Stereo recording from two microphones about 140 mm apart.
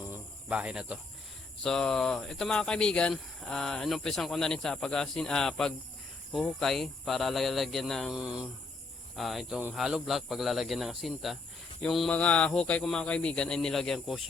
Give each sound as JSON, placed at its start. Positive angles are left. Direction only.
{"t": 0.1, "sound": "cricket", "side_deg": -10}
{"t": 1.6, "sound": "speech", "side_deg": 5}